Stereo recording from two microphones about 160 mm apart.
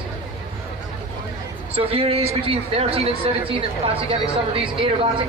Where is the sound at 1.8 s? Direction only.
35° right (ahead or behind).